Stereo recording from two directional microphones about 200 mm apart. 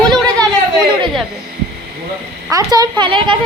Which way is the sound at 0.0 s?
5° left (ahead or behind).